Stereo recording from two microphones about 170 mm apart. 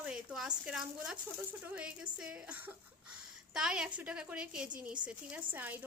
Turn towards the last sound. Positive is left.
turn(degrees=-10)  # may be behind; listen again after turning